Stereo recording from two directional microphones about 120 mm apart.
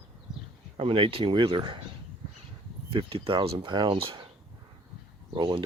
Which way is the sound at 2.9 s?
45° right (ahead or behind).